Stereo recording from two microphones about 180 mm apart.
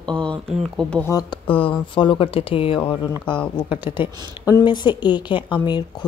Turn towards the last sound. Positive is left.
turn(degrees=25)  # may be behind; listen again after turning